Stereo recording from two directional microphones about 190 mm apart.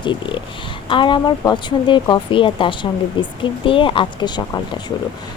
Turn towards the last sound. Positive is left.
turn(degrees=25)  # may be behind; listen again after turning